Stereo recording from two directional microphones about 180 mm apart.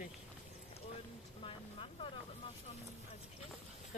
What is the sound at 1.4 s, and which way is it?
Vehicle, 30° left (ahead or behind).